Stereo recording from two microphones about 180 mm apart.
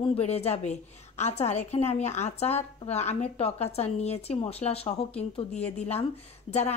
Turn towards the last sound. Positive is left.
turn(degrees=35)  # may be behind; listen again after turning